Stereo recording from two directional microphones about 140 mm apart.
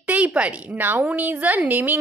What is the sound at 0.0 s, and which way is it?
A woman's voice, 10° right (ahead or behind).